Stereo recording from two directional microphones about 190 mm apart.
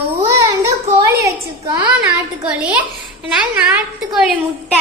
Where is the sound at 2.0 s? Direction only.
5° right (ahead or behind).